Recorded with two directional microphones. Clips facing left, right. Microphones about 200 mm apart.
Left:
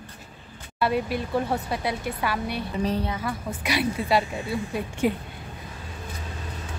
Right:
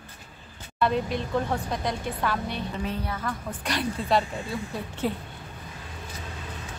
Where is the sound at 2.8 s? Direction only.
35° left (ahead or behind).